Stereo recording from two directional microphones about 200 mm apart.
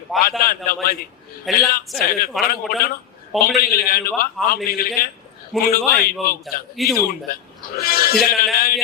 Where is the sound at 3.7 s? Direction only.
50° left (ahead or behind).